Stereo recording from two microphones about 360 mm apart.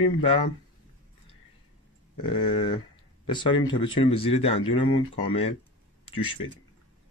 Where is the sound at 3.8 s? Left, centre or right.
Centre.